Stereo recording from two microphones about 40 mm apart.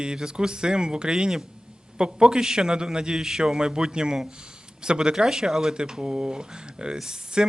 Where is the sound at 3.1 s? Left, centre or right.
Centre.